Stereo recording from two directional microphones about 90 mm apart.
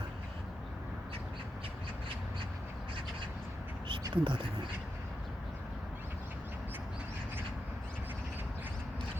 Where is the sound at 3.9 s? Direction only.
65° right (ahead or behind).